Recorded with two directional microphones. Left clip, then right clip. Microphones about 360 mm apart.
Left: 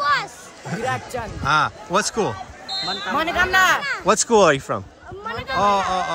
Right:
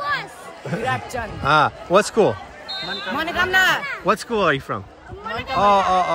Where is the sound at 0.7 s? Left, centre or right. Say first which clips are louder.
Right 1 dB; centre.